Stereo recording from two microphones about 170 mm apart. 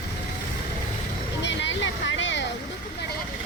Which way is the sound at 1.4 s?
90° left.